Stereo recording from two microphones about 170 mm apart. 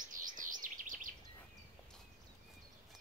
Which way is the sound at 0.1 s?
50° right (ahead or behind).